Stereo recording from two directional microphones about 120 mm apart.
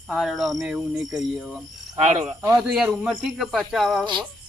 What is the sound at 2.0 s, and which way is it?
Speech, 65° right (ahead or behind).